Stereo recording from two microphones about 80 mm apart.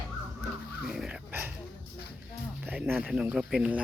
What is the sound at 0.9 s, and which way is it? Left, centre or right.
Dog, centre.